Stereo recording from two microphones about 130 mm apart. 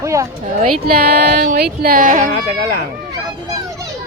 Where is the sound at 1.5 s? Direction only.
90° right.